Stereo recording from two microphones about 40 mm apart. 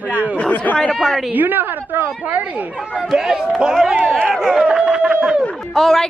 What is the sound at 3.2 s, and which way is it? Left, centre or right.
Speech, centre.